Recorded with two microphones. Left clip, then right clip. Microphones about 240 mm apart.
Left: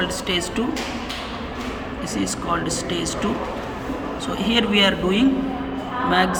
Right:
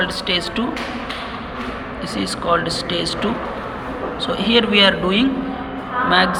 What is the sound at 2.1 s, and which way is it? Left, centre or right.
Speech, centre.